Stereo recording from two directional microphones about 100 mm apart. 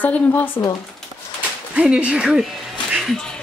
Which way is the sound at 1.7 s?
15° right (ahead or behind).